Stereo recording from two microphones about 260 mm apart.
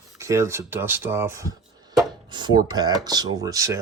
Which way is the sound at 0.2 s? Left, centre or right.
Centre.